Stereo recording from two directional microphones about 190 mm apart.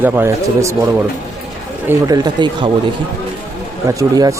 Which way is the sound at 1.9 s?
20° right (ahead or behind).